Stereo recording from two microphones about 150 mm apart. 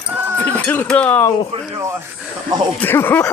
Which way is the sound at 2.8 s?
15° left (ahead or behind).